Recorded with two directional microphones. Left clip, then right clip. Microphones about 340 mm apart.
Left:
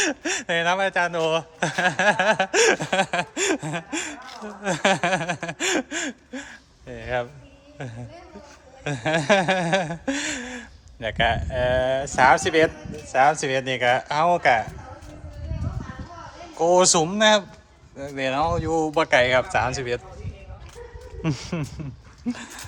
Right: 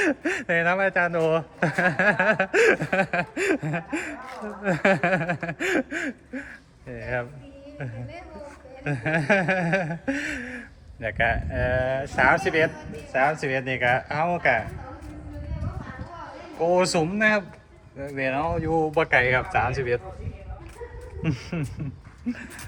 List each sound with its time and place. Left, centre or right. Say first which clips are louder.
0.0 s speech: even; centre
8.8 s speech: left 2 dB; centre
16.6 s speech: left 4 dB; centre
18.4 s speech: left 1 dB; centre
21.2 s speech: left 2 dB; centre